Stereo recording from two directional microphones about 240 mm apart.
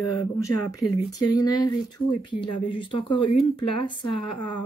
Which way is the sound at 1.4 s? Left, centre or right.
Centre.